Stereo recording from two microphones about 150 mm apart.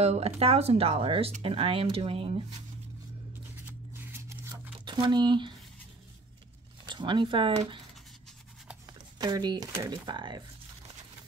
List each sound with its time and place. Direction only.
0.0 s speech: 45° right (ahead or behind)
3.6 s scissors: 15° right (ahead or behind)
4.7 s speech: 30° right (ahead or behind)
6.8 s speech: 30° right (ahead or behind)
8.8 s speech: 25° right (ahead or behind)